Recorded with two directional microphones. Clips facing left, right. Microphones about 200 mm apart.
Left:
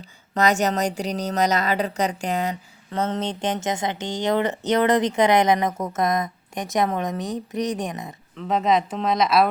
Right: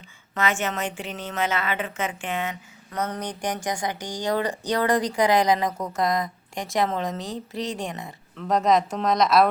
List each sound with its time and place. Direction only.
0.3 s a woman's voice: 40° left (ahead or behind); by 8.1 s 20° left (ahead or behind)
8.4 s speech: centre (ahead or behind)